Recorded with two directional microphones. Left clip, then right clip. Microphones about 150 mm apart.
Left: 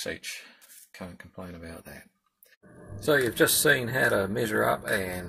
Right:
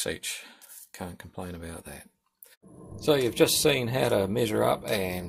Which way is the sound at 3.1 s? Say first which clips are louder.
Even; 10° right (ahead or behind).